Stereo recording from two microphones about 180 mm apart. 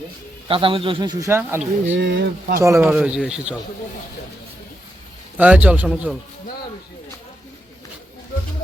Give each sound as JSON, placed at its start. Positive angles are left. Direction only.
{"t": 0.4, "sound": "a man's voice", "side_deg": -30}
{"t": 1.9, "sound": "speech", "side_deg": -85}
{"t": 2.6, "sound": "a man's voice", "side_deg": -15}
{"t": 2.9, "sound": "speech", "side_deg": -5}
{"t": 5.4, "sound": "a man's voice", "side_deg": -10}